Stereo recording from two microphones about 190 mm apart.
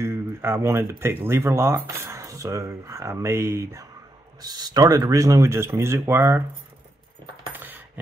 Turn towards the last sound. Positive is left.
turn(degrees=-10)  # may be behind; listen again after turning